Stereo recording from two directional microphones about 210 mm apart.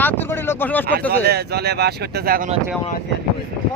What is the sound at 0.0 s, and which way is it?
Vehicle, 10° left (ahead or behind).